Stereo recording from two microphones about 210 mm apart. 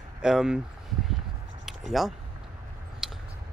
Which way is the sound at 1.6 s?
Centre (ahead or behind).